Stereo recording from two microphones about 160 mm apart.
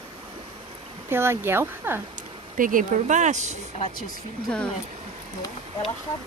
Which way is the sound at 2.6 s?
55° right (ahead or behind).